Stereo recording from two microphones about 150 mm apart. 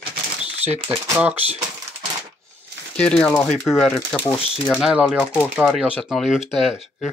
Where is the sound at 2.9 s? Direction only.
5° left (ahead or behind).